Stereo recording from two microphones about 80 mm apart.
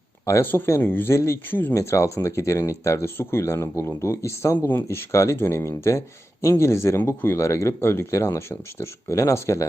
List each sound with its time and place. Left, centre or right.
0.3 s speech: left
4.5 s speech: left
7.4 s speech: left